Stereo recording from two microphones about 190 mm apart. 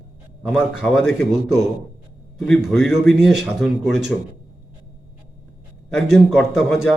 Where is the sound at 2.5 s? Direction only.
Centre (ahead or behind).